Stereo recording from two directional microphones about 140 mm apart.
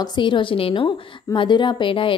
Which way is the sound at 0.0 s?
35° left (ahead or behind).